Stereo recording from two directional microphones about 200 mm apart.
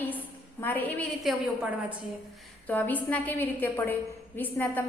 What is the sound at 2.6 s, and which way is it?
A woman's voice, 10° left (ahead or behind).